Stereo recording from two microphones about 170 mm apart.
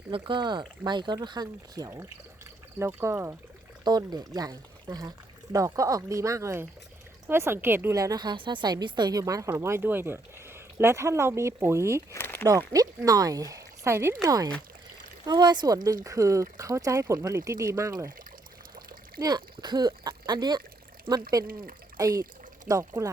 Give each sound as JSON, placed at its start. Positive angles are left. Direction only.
{"t": 0.1, "sound": "a woman's voice", "side_deg": -30}
{"t": 12.1, "sound": "a sound", "side_deg": 15}
{"t": 12.5, "sound": "speech", "side_deg": -20}
{"t": 19.2, "sound": "a woman's voice", "side_deg": -25}